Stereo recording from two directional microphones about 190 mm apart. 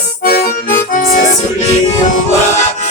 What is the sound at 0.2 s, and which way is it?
Music, 55° left (ahead or behind).